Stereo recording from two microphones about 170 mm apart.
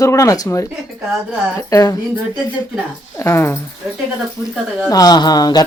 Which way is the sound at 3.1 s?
15° left (ahead or behind).